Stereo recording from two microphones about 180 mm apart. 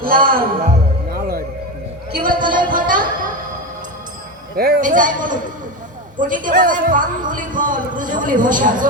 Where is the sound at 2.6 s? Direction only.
50° right (ahead or behind).